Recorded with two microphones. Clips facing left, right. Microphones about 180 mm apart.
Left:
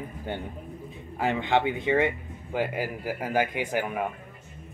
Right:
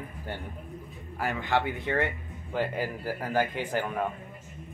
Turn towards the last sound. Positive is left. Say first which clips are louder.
# left 1 dB
turn(degrees=10)  # may be behind; listen again after turning